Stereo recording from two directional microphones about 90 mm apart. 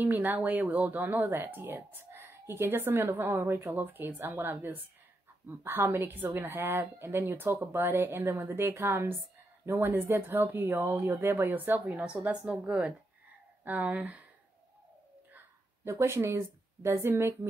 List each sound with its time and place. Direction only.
0.0 s speech: 20° right (ahead or behind)
15.3 s a woman's voice: 25° right (ahead or behind)